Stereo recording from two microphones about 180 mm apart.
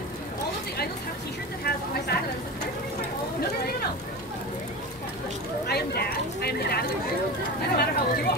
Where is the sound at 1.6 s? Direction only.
60° left (ahead or behind).